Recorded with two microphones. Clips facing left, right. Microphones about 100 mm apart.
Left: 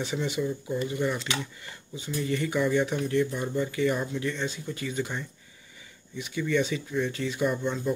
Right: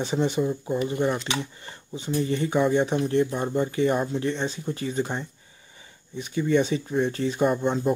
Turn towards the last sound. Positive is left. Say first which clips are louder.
# right 5 dB
turn(degrees=-50)  # may be behind; listen again after turning